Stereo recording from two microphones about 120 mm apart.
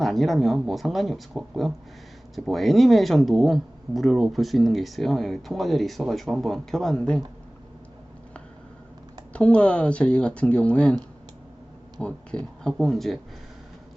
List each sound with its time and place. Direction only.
0.0 s speech: centre (ahead or behind)
9.3 s speech: 10° left (ahead or behind)